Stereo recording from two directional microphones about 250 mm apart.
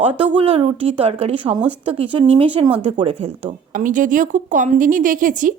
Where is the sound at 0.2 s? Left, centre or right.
Right.